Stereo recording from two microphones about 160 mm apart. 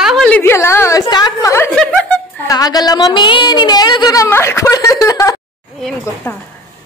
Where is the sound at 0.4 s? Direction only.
15° left (ahead or behind).